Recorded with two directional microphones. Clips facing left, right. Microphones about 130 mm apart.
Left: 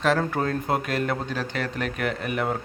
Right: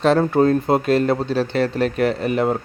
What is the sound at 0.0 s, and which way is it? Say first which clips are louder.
A man's voice: right 8 dB; 30° right (ahead or behind).